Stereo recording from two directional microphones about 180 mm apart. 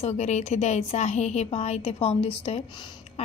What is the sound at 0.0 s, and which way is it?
A woman's voice, 35° left (ahead or behind).